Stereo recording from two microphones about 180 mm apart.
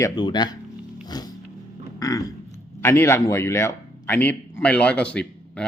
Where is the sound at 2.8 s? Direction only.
15° left (ahead or behind).